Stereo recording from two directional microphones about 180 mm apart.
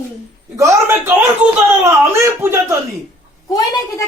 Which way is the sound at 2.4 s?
15° right (ahead or behind).